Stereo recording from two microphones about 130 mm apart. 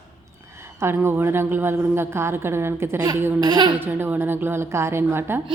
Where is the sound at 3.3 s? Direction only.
35° right (ahead or behind).